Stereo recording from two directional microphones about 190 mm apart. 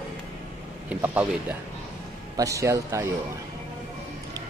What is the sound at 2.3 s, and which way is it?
Speech, 15° right (ahead or behind).